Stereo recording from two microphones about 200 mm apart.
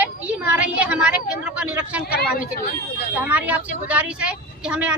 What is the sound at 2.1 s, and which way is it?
Speech, 50° left (ahead or behind).